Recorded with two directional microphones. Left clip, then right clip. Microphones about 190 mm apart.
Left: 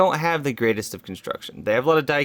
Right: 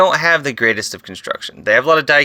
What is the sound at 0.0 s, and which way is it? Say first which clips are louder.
Speech: right 7 dB; 45° left (ahead or behind).